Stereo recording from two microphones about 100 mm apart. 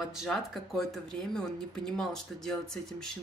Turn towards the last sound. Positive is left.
turn(degrees=5)  # may be behind; listen again after turning